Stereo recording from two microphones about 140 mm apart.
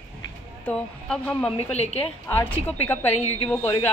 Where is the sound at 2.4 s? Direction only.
15° left (ahead or behind).